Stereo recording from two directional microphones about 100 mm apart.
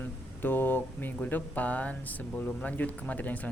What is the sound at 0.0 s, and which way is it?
Speech, 20° left (ahead or behind).